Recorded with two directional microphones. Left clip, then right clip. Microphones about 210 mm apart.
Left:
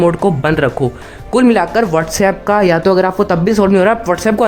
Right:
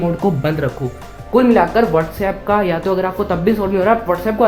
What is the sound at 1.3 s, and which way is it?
Speech, 25° left (ahead or behind).